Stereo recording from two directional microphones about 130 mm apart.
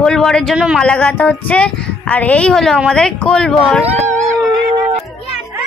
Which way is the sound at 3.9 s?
60° right (ahead or behind).